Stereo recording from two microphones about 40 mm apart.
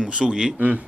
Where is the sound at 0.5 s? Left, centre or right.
Right.